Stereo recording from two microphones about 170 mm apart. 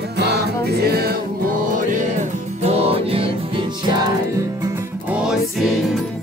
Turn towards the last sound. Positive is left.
turn(degrees=-5)  # may be behind; listen again after turning